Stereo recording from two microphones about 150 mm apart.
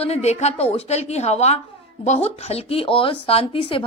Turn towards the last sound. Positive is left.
turn(degrees=35)  # may be behind; listen again after turning